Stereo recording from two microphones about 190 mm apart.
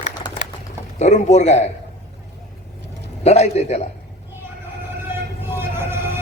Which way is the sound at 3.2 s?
35° left (ahead or behind).